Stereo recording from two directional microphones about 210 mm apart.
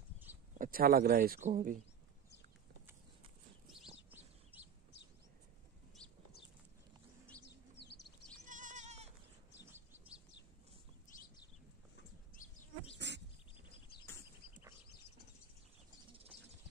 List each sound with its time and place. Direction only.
0.6 s speech: 45° right (ahead or behind)
3.7 s bird: centre (ahead or behind)
8.5 s goat: 35° right (ahead or behind)
12.4 s bee: 35° left (ahead or behind)
12.9 s a sound: 55° right (ahead or behind)
13.6 s a sound: 25° left (ahead or behind)